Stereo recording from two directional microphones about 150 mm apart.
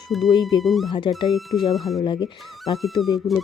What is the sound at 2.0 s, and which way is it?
Speech, 30° left (ahead or behind).